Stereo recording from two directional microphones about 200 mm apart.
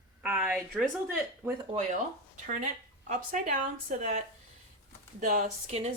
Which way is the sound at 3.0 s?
40° right (ahead or behind).